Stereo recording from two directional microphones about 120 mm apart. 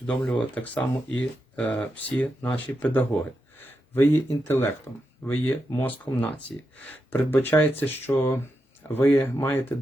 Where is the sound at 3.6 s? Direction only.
15° left (ahead or behind).